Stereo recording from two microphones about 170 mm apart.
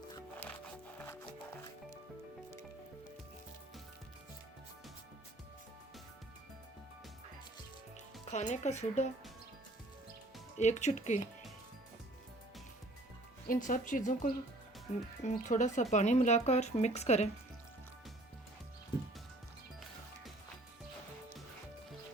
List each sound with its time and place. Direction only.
0.3 s music: 10° left (ahead or behind)
8.3 s speech: 40° left (ahead or behind)
10.6 s speech: 45° left (ahead or behind)
13.5 s speech: 50° left (ahead or behind)